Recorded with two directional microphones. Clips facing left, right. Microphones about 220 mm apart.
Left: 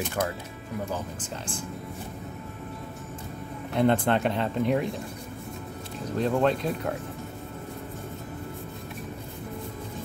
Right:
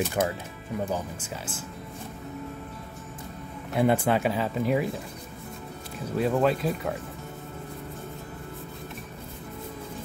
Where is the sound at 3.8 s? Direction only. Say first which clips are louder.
Even; 10° right (ahead or behind).